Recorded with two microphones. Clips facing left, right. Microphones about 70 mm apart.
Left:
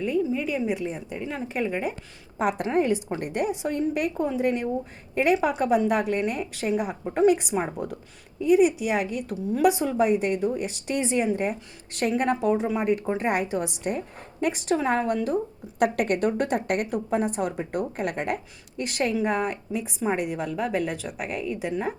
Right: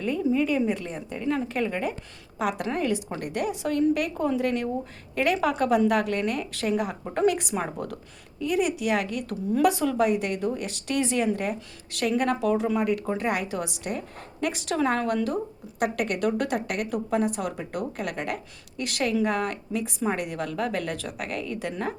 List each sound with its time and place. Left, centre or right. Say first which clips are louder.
0.0 s a woman's voice: right 1 dB; centre
2.4 s a woman's voice: left 2 dB; left
2.6 s a woman's voice: left 4 dB; left
15.8 s a woman's voice: left 3 dB; left; by 21.9 s centre